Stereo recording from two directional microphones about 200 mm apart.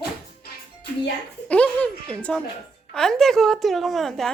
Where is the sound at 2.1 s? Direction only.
5° left (ahead or behind).